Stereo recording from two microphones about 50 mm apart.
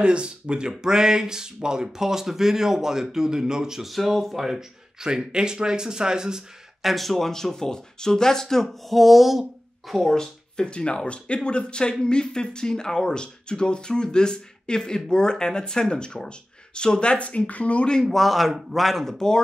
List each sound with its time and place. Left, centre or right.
0.0 s speech: centre
6.8 s speech: centre
10.1 s speech: centre
18.1 s a man's voice: centre